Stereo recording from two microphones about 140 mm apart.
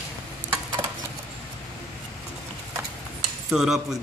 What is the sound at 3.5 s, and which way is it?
Speech, 5° right (ahead or behind).